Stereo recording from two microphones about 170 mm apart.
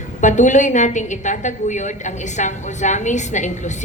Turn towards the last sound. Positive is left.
turn(degrees=45)  # may be behind; listen again after turning